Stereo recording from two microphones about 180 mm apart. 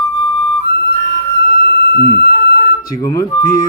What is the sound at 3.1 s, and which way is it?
Speech, 20° left (ahead or behind).